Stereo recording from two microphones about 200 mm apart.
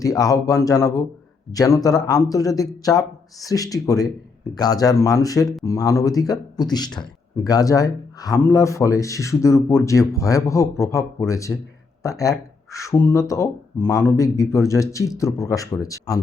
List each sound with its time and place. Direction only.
0.0 s speech: 15° left (ahead or behind)